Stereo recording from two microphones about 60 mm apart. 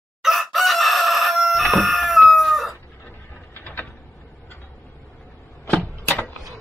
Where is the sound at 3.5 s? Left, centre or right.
Left.